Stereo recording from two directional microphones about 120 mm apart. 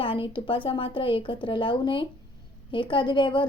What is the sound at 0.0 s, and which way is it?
A woman's voice, 45° left (ahead or behind).